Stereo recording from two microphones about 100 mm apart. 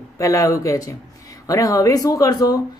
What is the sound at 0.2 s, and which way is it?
Speech, 35° left (ahead or behind).